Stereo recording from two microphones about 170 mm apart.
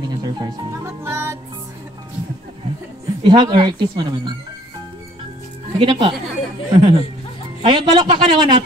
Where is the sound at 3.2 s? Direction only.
25° right (ahead or behind).